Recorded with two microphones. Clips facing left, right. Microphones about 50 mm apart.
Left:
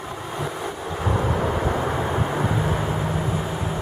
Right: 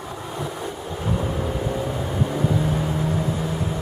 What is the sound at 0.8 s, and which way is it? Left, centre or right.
Vehicle, left.